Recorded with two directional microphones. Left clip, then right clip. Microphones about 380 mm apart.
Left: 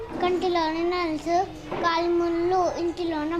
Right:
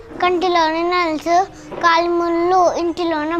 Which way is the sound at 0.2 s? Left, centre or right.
Right.